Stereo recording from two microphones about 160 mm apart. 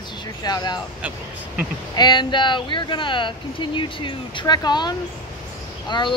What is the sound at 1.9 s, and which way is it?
Speech, 25° left (ahead or behind).